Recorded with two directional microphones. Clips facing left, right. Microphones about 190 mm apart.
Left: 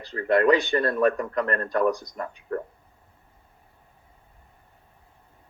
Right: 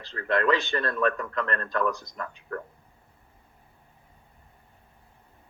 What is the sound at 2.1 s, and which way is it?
Speech, 30° left (ahead or behind).